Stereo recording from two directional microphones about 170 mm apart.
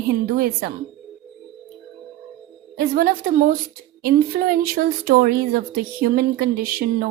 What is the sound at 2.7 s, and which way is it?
Speech, 60° right (ahead or behind).